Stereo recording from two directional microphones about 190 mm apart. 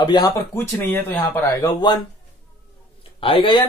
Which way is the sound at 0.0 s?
20° left (ahead or behind).